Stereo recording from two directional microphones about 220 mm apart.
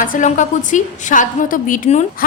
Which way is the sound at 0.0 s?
35° left (ahead or behind).